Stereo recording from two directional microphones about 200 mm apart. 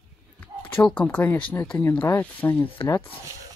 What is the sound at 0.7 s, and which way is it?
Speech, 10° left (ahead or behind).